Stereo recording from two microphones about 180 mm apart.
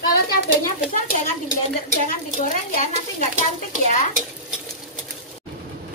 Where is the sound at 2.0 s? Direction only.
45° left (ahead or behind).